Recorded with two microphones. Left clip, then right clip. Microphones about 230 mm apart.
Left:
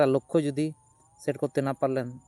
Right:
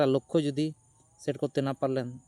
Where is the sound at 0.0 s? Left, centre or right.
Centre.